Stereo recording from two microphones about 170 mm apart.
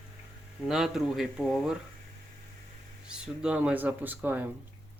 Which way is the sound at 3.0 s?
5° right (ahead or behind).